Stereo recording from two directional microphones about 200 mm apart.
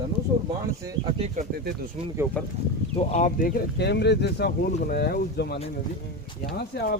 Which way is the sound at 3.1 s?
40° left (ahead or behind).